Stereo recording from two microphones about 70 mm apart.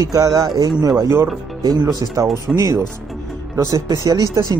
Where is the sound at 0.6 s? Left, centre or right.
Right.